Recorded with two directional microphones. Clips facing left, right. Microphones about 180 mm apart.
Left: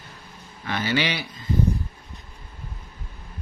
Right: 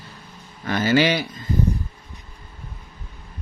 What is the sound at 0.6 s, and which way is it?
Speech, 45° right (ahead or behind).